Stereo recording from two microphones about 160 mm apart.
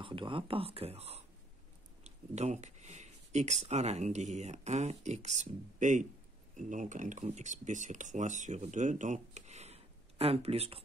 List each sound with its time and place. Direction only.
0.0 s speech: 30° right (ahead or behind)